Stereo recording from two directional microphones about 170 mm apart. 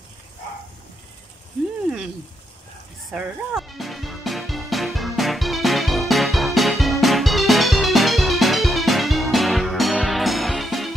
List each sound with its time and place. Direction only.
3.1 s music: 5° right (ahead or behind)